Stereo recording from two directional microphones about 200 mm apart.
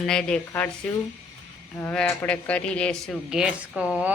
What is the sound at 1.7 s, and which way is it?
Speech, 5° left (ahead or behind).